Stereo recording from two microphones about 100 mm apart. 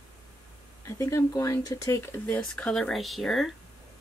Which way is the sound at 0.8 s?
30° left (ahead or behind).